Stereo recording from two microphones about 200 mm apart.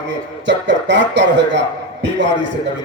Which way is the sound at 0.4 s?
65° right (ahead or behind).